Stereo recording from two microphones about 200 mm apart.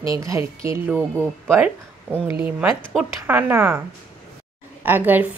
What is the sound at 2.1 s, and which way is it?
A woman's voice, 10° right (ahead or behind).